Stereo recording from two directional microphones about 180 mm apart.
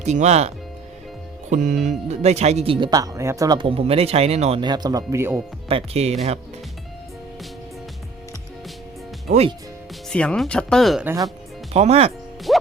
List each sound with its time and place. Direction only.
0.0 s speech: 40° right (ahead or behind); by 5.4 s 15° right (ahead or behind)
5.6 s speech: 35° right (ahead or behind)
9.3 s speech: 40° right (ahead or behind)
10.1 s speech: 5° left (ahead or behind)
11.0 s speech: 15° right (ahead or behind)
11.7 s speech: 35° right (ahead or behind)
12.5 s music: centre (ahead or behind)